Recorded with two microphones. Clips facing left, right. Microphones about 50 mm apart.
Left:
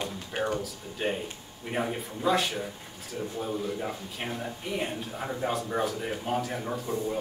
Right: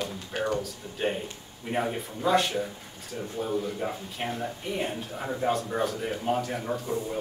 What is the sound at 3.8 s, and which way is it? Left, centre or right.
Speech, centre.